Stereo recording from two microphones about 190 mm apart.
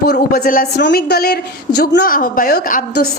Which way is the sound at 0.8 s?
65° left (ahead or behind).